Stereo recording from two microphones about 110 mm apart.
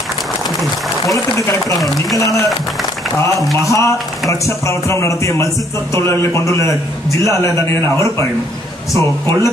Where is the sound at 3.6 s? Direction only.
30° left (ahead or behind).